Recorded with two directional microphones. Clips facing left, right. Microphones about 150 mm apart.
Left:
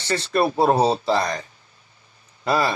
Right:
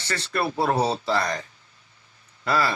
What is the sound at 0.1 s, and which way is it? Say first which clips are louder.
Speech: left 6 dB; 25° left (ahead or behind).